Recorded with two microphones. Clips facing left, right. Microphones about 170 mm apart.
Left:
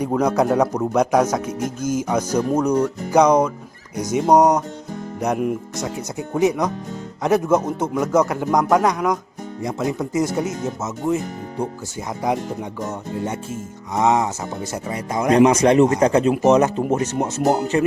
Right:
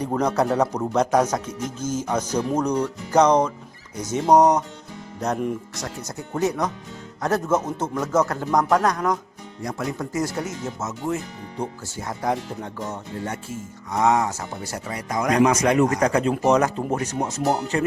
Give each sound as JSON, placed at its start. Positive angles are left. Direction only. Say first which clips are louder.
{"t": 0.0, "sound": "a man's voice", "louder": "left 3 dB", "side_deg": 10}
{"t": 6.1, "sound": "a man's voice", "louder": "left 5 dB", "side_deg": 15}
{"t": 12.4, "sound": "music", "louder": "left 4 dB", "side_deg": 45}
{"t": 13.2, "sound": "speech", "louder": "left 4 dB", "side_deg": 20}